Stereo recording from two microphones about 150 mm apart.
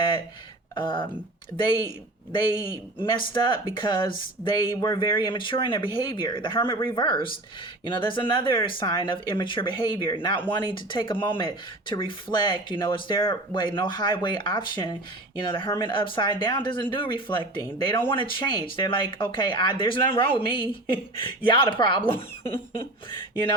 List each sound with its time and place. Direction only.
0.8 s speech: 30° left (ahead or behind)
3.0 s speech: 30° left (ahead or behind)